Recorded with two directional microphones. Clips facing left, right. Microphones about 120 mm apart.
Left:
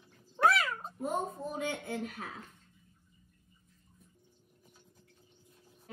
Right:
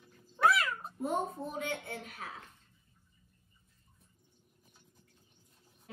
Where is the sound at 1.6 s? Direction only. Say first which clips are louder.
Left 5 dB; 25° left (ahead or behind).